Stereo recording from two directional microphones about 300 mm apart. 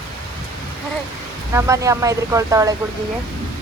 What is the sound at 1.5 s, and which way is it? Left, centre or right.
Speech, centre.